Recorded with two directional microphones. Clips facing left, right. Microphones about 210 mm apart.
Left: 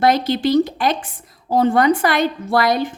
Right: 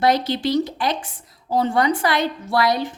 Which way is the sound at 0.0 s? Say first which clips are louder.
Left 3 dB; 50° left (ahead or behind).